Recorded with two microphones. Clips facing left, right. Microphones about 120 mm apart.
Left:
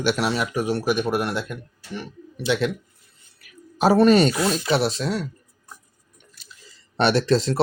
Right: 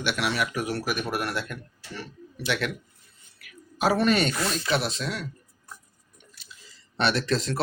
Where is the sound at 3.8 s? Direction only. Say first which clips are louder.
Left 7 dB; 35° left (ahead or behind).